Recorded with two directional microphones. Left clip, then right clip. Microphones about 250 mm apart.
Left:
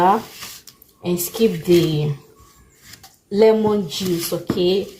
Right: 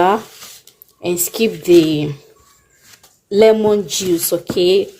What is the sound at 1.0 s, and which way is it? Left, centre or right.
A woman's voice, right.